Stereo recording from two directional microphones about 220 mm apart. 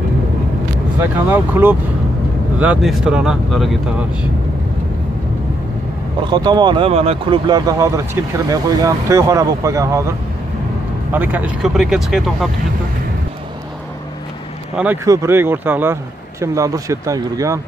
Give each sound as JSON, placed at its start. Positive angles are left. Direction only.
{"t": 0.9, "sound": "speech", "side_deg": -10}
{"t": 6.2, "sound": "speech", "side_deg": -20}
{"t": 14.8, "sound": "speech", "side_deg": -10}